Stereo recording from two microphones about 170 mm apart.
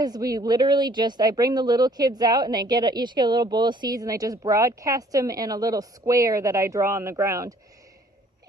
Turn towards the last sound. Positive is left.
turn(degrees=-20)  # may be behind; listen again after turning